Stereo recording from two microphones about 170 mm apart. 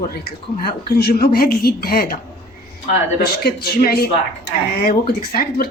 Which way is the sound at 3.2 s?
65° left (ahead or behind).